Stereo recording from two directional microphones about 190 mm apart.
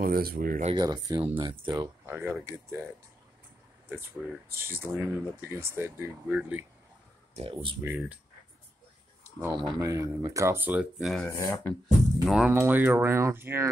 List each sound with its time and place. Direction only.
0.0 s speech: 50° right (ahead or behind)
0.7 s speech: 20° right (ahead or behind)
1.7 s speech: 10° right (ahead or behind)
3.9 s speech: 10° right (ahead or behind)
7.3 s speech: 30° right (ahead or behind)
7.8 s speech: 10° right (ahead or behind)
9.2 s speech: 15° right (ahead or behind)
11.2 s speech: 15° left (ahead or behind)
12.3 s speech: 5° right (ahead or behind)